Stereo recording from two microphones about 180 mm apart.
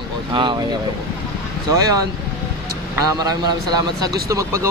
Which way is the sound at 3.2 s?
20° right (ahead or behind).